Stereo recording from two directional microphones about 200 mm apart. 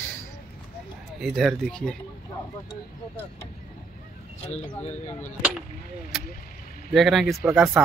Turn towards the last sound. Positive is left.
turn(degrees=0)  # may be behind; listen again after turning